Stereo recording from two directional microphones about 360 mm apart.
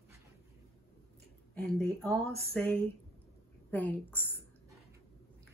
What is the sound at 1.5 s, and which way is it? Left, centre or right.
Speech, centre.